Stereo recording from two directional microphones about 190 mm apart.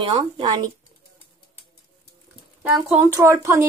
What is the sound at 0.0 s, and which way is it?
Speech, 25° right (ahead or behind).